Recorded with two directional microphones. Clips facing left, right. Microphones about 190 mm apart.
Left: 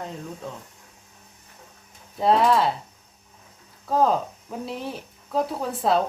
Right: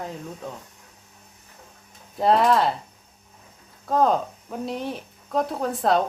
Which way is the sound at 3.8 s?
Centre (ahead or behind).